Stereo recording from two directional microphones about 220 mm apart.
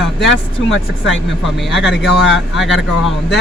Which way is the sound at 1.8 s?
50° left (ahead or behind).